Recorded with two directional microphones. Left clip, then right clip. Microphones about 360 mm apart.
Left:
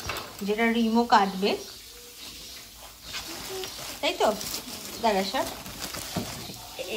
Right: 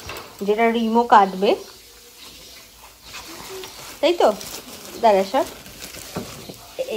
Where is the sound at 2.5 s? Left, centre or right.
Centre.